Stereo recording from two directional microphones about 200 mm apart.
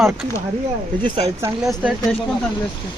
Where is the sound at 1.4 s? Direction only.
15° right (ahead or behind).